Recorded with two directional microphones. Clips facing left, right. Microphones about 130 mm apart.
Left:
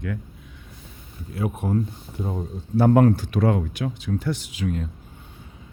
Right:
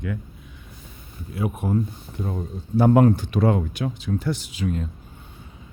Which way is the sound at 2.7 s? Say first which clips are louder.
Even; 15° right (ahead or behind).